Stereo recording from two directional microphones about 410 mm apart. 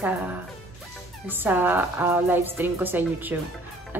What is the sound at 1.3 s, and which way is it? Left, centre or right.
Speech, centre.